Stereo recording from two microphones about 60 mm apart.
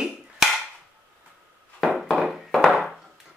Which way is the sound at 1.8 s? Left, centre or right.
Centre.